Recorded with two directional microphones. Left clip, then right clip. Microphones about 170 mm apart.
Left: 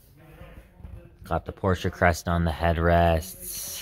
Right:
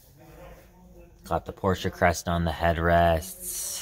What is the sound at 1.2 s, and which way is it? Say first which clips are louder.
Speech: even; 25° left (ahead or behind).